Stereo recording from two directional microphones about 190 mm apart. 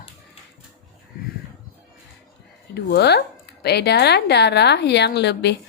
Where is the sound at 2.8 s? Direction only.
60° left (ahead or behind).